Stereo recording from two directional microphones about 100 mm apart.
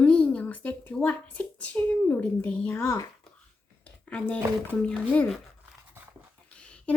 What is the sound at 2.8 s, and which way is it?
Speech, 30° left (ahead or behind).